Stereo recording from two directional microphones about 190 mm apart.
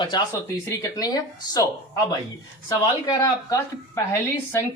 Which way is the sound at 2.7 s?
20° left (ahead or behind).